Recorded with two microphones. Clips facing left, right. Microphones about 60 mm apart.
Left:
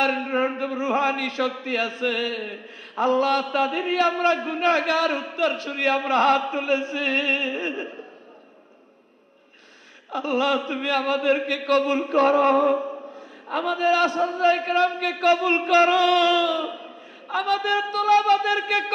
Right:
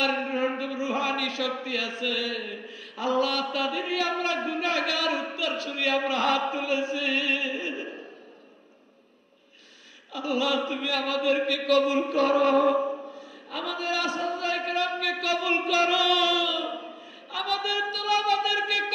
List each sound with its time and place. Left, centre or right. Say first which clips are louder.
0.0 s a man's voice: left 4 dB; left
10.1 s a man's voice: left 4 dB; left